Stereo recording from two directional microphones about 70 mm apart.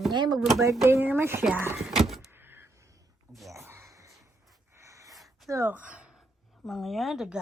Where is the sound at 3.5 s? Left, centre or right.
Right.